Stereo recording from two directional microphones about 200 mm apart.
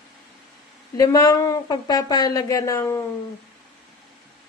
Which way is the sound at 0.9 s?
15° left (ahead or behind).